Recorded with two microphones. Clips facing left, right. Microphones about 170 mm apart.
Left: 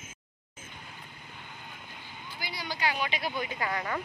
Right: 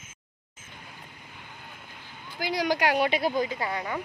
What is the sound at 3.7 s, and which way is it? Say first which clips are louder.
Speech: right 1 dB; 15° right (ahead or behind).